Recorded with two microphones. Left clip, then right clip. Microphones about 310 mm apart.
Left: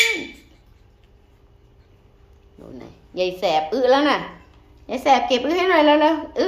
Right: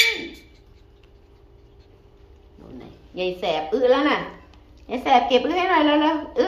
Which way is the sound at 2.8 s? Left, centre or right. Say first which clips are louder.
Left 5 dB; centre.